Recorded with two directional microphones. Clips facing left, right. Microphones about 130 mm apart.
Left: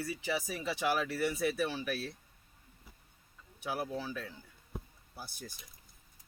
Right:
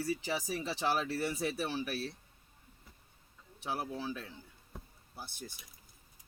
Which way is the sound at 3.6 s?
30° right (ahead or behind).